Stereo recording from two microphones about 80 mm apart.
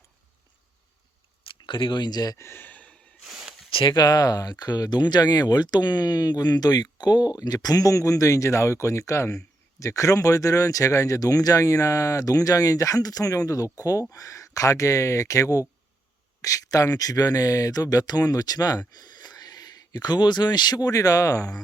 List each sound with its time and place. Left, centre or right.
1.5 s speech: left
2.4 s speech: left
3.2 s a sound: centre
3.7 s speech: left
4.0 s speech: left